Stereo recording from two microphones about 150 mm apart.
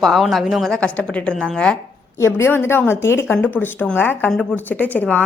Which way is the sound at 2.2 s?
15° left (ahead or behind).